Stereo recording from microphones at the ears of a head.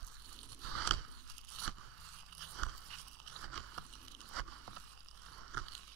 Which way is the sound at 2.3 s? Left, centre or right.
Right.